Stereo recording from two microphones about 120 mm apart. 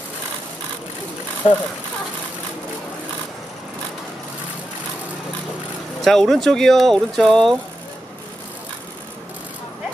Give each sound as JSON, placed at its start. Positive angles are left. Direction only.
{"t": 1.4, "sound": "speech", "side_deg": 50}
{"t": 6.0, "sound": "speech", "side_deg": 5}